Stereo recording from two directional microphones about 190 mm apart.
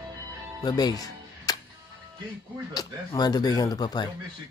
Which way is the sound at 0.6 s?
20° left (ahead or behind).